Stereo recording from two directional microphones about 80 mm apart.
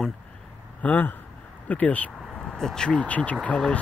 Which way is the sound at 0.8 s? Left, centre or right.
Left.